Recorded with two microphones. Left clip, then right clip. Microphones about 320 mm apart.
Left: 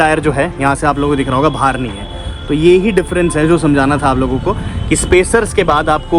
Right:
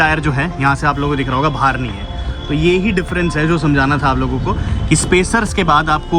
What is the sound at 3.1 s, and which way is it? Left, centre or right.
Speech, left.